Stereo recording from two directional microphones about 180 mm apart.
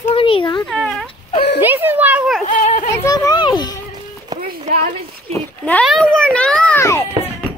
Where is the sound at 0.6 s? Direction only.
Centre (ahead or behind).